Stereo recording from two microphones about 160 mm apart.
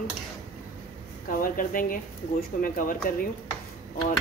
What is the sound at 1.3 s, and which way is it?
Speech, 60° left (ahead or behind).